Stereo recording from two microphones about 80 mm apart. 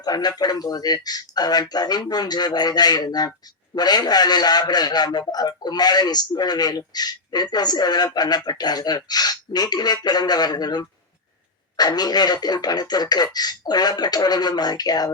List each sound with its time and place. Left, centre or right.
0.0 s speech: left